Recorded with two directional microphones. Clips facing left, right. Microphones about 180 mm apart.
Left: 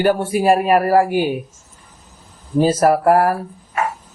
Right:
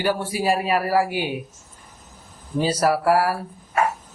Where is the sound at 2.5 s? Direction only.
50° left (ahead or behind).